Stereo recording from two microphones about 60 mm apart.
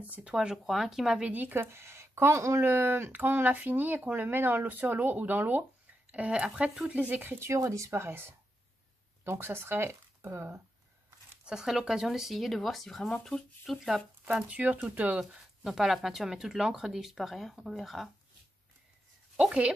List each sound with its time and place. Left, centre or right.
0.0 s speech: right
0.3 s speech: centre
1.2 s speech: right
6.1 s speech: right
7.3 s speech: right
11.4 s speech: centre
14.2 s speech: right
15.1 s speech: centre